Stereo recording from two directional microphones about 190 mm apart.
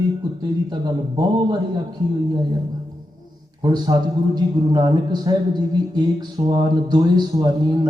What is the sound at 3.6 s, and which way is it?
A man's voice, 20° right (ahead or behind).